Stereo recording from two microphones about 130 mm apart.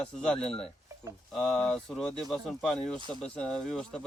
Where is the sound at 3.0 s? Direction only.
35° right (ahead or behind).